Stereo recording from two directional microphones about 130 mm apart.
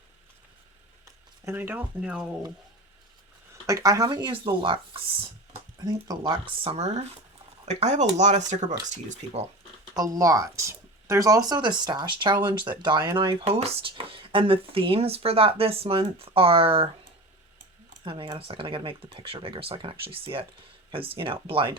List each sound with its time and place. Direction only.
1.0 s speech: 20° right (ahead or behind)
3.5 s speech: 25° right (ahead or behind); by 5.2 s 40° right (ahead or behind)
5.8 s speech: 30° right (ahead or behind)
6.6 s speech: 50° right (ahead or behind); by 9.4 s 65° right (ahead or behind)
9.9 s speech: 25° right (ahead or behind); by 16.9 s 45° right (ahead or behind)
18.0 s speech: 40° right (ahead or behind)